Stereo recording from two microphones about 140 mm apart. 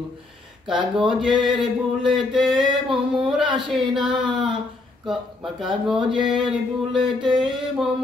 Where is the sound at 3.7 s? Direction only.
Centre (ahead or behind).